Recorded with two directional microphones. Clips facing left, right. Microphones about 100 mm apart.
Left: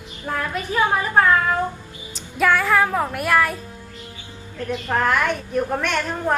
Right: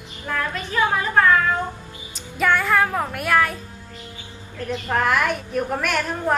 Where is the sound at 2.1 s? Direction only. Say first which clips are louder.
Left 2 dB; centre (ahead or behind).